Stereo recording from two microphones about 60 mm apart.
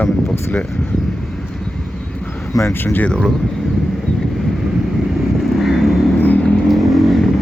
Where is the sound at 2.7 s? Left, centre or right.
Left.